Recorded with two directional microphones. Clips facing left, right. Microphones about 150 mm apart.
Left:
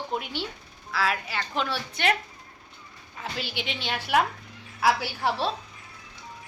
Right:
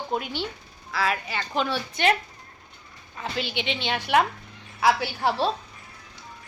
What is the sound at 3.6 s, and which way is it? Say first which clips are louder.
A woman's voice: right 3 dB; 5° left (ahead or behind).